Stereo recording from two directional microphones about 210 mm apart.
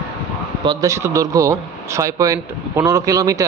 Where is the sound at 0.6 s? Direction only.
20° right (ahead or behind).